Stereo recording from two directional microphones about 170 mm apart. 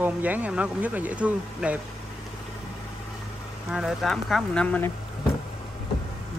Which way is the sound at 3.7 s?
Centre (ahead or behind).